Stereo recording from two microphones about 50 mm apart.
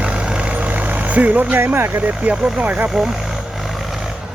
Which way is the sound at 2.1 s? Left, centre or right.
Right.